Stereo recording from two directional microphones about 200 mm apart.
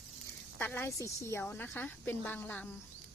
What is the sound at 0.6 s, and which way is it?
A woman's voice, 10° left (ahead or behind).